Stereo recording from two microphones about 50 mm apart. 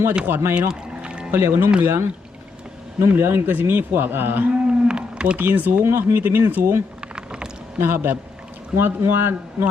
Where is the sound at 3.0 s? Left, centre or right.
Right.